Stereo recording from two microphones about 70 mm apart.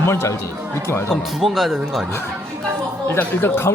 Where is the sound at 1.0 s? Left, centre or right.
Centre.